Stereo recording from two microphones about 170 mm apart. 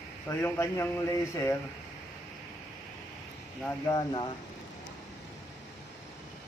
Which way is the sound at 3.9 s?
25° left (ahead or behind).